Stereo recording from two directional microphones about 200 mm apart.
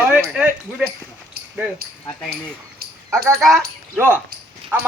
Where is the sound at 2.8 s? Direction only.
50° right (ahead or behind).